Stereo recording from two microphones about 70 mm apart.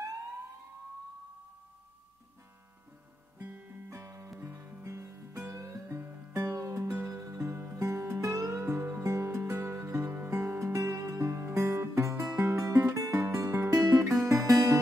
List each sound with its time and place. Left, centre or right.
3.3 s guitar: right
3.9 s music: right
4.4 s music: right
4.8 s music: right
9.0 s music: right
9.7 s music: right
10.3 s music: right
12.5 s guitar: right
13.3 s music: right
14.0 s music: right